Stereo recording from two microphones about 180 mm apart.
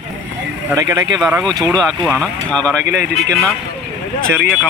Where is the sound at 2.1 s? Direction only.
5° left (ahead or behind).